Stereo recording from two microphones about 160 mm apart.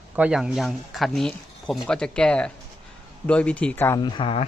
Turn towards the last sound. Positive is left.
turn(degrees=30)  # may be behind; listen again after turning